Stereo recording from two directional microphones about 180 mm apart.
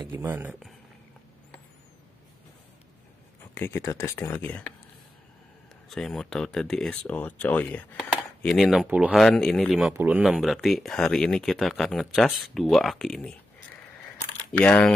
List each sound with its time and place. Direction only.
0.1 s speech: 10° right (ahead or behind)
3.5 s speech: 15° left (ahead or behind)
5.9 s speech: centre (ahead or behind)
14.6 s speech: 5° left (ahead or behind)